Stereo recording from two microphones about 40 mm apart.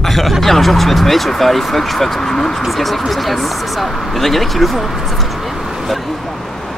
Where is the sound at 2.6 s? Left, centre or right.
Centre.